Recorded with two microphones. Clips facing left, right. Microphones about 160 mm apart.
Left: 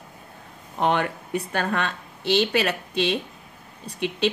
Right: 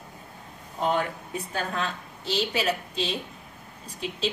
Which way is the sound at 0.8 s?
70° left (ahead or behind).